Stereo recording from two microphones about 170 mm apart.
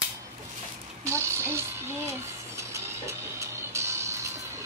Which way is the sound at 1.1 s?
15° right (ahead or behind).